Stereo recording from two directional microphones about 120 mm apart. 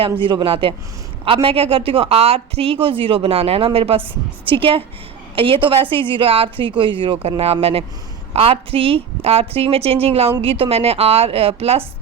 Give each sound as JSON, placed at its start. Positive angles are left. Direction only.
{"t": 0.0, "sound": "a woman's voice", "side_deg": -45}